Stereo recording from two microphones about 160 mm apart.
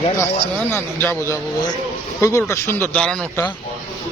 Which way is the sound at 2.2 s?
20° left (ahead or behind).